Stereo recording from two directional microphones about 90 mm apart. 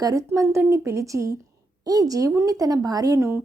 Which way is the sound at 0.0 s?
40° right (ahead or behind).